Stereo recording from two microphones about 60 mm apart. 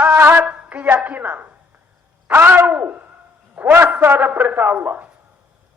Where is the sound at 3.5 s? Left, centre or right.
Right.